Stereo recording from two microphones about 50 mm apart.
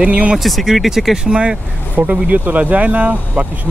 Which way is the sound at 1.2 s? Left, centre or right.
Centre.